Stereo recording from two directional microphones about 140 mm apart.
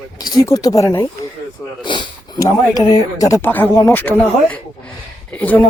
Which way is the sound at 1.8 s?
35° left (ahead or behind).